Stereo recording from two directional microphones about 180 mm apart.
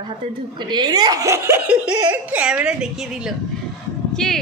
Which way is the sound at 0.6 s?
25° right (ahead or behind).